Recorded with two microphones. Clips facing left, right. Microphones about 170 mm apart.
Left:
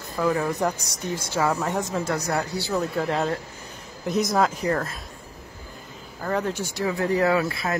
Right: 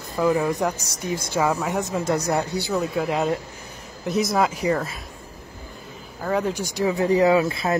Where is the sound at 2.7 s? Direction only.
5° right (ahead or behind).